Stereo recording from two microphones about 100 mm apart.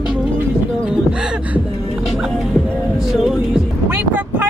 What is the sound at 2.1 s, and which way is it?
Music, centre (ahead or behind).